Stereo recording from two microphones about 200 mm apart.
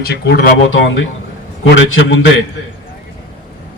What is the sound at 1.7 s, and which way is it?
Speech, 70° left (ahead or behind).